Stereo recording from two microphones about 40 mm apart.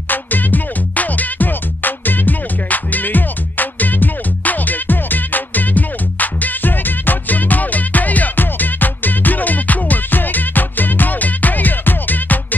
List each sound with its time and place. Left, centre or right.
0.1 s music: left